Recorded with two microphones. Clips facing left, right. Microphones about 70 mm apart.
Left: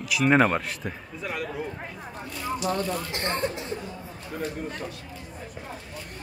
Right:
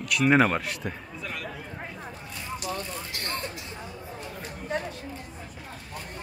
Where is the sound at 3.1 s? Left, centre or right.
Left.